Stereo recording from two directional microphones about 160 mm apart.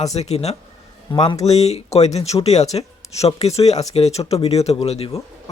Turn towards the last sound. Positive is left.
turn(degrees=40)  # may be behind; listen again after turning